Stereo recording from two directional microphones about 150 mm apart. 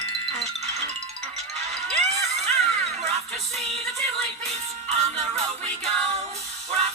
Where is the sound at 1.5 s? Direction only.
45° right (ahead or behind).